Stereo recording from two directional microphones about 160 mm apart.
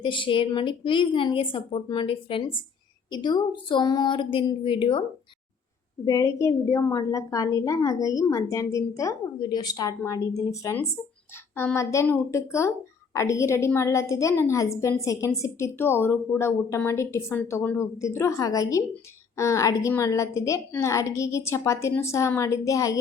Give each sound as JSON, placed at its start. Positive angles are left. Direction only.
{"t": 0.0, "sound": "a woman's voice", "side_deg": 30}
{"t": 6.1, "sound": "a woman's voice", "side_deg": 20}